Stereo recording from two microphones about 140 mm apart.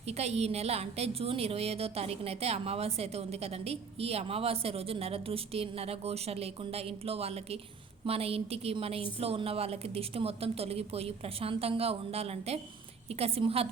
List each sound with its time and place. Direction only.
0.1 s a woman's voice: 50° right (ahead or behind)